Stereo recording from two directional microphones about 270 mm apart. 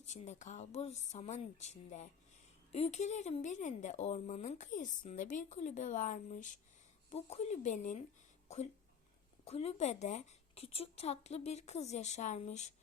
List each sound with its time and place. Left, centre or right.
0.0 s a woman's voice: left
9.4 s a woman's voice: left